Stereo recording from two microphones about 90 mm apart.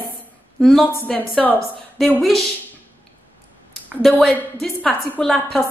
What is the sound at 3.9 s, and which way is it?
A woman's voice, centre (ahead or behind).